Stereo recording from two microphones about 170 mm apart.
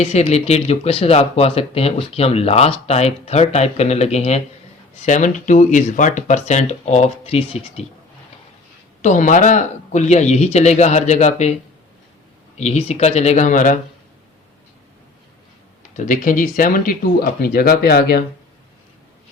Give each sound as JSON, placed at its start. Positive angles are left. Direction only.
{"t": 0.0, "sound": "speech", "side_deg": 40}
{"t": 9.0, "sound": "speech", "side_deg": 45}
{"t": 12.5, "sound": "speech", "side_deg": 40}
{"t": 16.0, "sound": "speech", "side_deg": 50}